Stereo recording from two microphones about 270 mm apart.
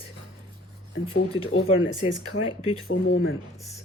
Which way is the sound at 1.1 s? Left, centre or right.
Left.